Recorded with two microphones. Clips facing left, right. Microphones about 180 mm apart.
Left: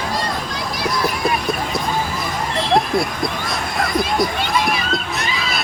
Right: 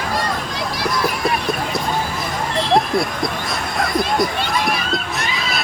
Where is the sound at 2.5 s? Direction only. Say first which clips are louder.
Right 1 dB; centre (ahead or behind).